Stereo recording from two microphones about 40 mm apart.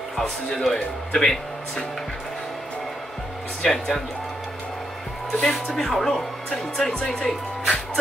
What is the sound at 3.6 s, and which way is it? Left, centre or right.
Speech, centre.